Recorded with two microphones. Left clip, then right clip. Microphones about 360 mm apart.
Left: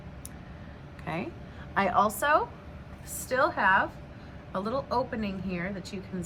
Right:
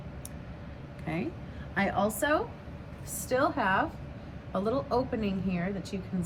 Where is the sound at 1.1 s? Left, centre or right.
Centre.